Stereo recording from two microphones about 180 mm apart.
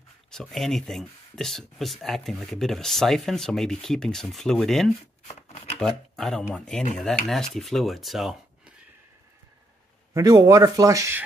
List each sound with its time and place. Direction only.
0.3 s speech: centre (ahead or behind)
10.1 s speech: 20° right (ahead or behind)